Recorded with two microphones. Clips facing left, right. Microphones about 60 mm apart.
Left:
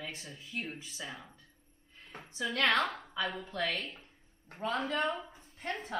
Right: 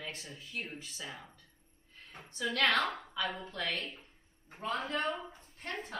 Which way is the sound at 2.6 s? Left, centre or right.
Centre.